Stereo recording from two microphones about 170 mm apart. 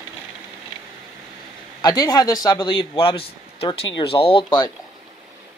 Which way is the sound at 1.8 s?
25° left (ahead or behind).